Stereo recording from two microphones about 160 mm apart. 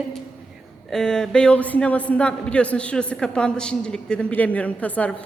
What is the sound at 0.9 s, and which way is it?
A man's voice, 5° left (ahead or behind).